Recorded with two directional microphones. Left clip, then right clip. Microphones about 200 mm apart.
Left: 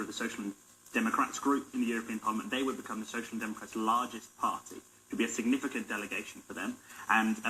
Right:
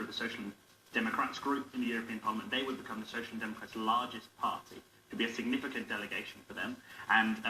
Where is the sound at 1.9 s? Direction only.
50° left (ahead or behind).